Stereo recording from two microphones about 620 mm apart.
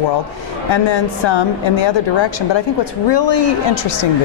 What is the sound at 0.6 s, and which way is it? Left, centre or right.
A woman's voice, left.